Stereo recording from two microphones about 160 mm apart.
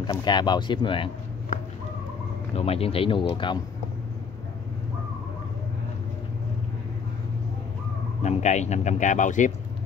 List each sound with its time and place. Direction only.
0.0 s speech: 25° left (ahead or behind)
2.5 s speech: 40° left (ahead or behind)
8.2 s speech: 45° left (ahead or behind)